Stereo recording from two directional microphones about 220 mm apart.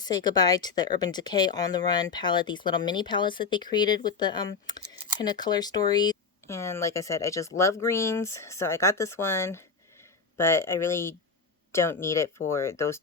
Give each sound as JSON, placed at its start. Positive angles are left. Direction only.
{"t": 0.0, "sound": "speech", "side_deg": 20}